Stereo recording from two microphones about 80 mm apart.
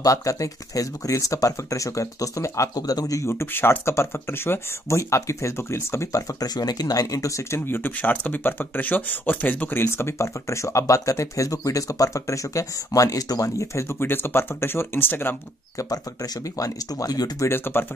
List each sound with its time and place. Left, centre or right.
0.0 s speech: left
7.6 s speech: left
15.8 s speech: left
17.5 s speech: left